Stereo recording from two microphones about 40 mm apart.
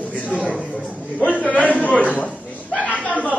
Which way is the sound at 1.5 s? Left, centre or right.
Left.